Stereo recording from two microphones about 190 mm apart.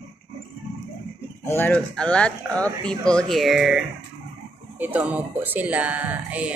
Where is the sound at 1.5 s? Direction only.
10° left (ahead or behind).